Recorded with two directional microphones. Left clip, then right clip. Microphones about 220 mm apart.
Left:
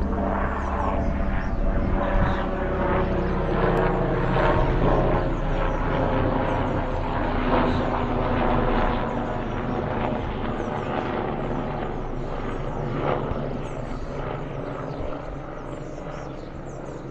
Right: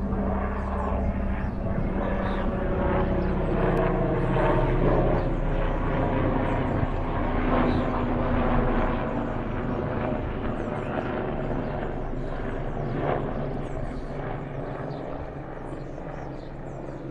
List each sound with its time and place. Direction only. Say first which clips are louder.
0.4 s vehicle: left 4 dB; 5° right (ahead or behind); by 11.3 s 25° left (ahead or behind)
12.9 s vehicle: left 2 dB; 35° left (ahead or behind)